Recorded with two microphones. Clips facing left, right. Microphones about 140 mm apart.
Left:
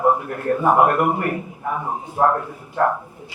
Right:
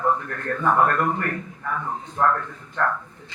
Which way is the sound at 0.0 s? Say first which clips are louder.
Left 5 dB; 15° left (ahead or behind).